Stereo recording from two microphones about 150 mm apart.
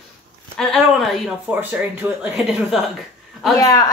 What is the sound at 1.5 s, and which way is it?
Speech, 10° right (ahead or behind).